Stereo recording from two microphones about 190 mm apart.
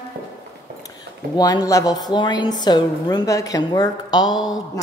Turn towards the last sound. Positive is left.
turn(degrees=20)  # may be behind; listen again after turning